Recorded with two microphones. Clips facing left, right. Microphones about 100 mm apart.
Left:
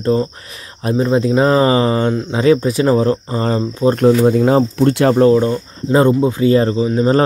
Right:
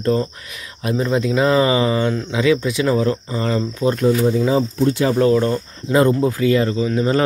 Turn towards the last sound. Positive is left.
turn(degrees=35)  # may be behind; listen again after turning